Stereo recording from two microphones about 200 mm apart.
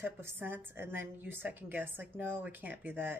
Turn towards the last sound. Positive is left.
turn(degrees=-10)  # may be behind; listen again after turning